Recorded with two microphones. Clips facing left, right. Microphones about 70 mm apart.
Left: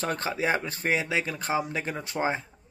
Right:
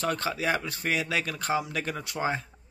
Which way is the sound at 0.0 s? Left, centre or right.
Left.